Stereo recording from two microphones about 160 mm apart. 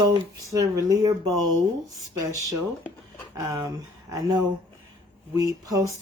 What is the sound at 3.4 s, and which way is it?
Speech, 20° right (ahead or behind).